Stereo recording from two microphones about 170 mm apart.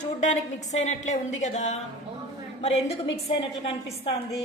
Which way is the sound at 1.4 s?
40° left (ahead or behind).